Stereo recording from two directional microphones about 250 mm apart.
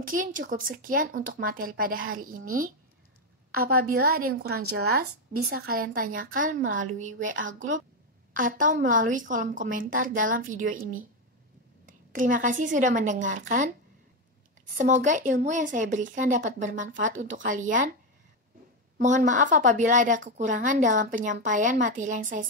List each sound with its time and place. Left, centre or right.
0.0 s a woman's voice: right
8.4 s a woman's voice: right
12.1 s a woman's voice: right
14.8 s a woman's voice: right
18.9 s a woman's voice: right